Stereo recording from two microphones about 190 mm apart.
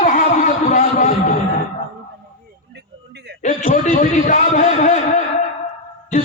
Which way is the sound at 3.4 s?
40° left (ahead or behind).